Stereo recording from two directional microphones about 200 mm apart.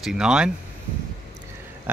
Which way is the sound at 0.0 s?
5° right (ahead or behind).